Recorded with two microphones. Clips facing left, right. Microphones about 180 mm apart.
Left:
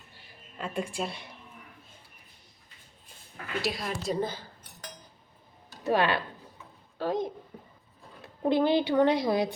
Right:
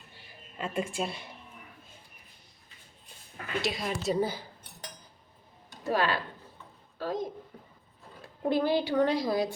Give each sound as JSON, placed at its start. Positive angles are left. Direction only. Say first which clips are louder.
{"t": 0.6, "sound": "a woman's voice", "louder": "right 1 dB", "side_deg": -5}
{"t": 3.6, "sound": "a woman's voice", "louder": "even", "side_deg": 0}
{"t": 5.8, "sound": "a woman's voice", "louder": "left 3 dB", "side_deg": 20}